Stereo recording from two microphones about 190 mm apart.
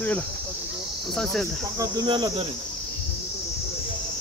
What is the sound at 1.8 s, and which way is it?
Cricket, 20° right (ahead or behind).